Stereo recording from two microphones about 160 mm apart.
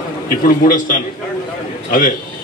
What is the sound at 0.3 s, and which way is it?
A man's voice, 60° left (ahead or behind).